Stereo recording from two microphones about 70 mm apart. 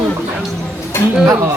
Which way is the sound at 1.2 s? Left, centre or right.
Right.